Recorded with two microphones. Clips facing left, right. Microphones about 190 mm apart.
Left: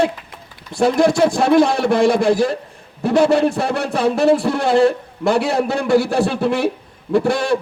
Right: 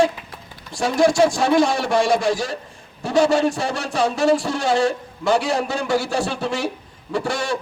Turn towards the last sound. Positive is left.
turn(degrees=55)  # may be behind; listen again after turning